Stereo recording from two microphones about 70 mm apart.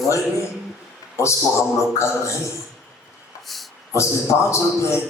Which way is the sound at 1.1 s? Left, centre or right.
Left.